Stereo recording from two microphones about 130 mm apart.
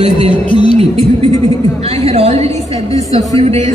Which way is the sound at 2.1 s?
55° right (ahead or behind).